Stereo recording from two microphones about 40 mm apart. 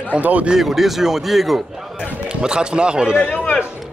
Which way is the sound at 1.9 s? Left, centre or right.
Centre.